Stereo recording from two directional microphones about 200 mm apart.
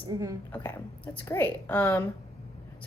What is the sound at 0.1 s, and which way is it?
Speech, 15° right (ahead or behind).